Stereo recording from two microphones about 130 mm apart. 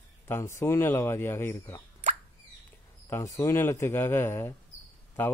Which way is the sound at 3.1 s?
20° left (ahead or behind).